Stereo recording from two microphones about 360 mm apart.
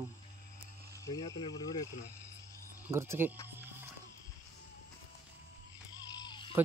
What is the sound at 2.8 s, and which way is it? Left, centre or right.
Speech, centre.